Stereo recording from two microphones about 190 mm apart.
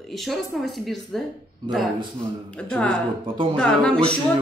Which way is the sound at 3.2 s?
25° right (ahead or behind).